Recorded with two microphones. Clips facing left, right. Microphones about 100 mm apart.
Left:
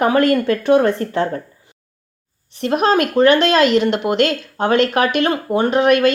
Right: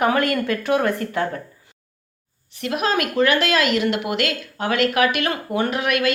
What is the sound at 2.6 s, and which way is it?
A woman's voice, 35° left (ahead or behind).